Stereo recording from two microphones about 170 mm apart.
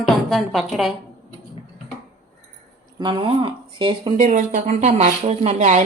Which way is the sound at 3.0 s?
30° right (ahead or behind).